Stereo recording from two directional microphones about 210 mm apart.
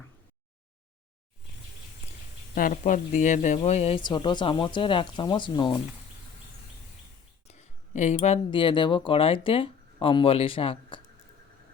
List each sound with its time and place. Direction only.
2.6 s speech: 40° left (ahead or behind); by 5.8 s 25° left (ahead or behind)
7.4 s speech: 30° left (ahead or behind)